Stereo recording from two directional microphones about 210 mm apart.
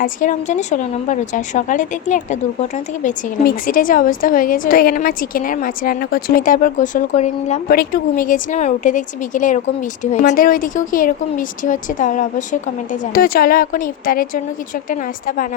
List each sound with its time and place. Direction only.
0.0 s a woman's voice: 35° left (ahead or behind)